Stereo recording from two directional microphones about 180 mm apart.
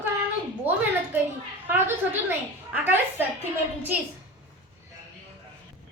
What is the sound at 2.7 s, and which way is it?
Speech, 10° right (ahead or behind).